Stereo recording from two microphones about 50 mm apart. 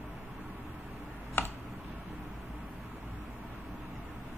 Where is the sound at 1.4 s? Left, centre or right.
Left.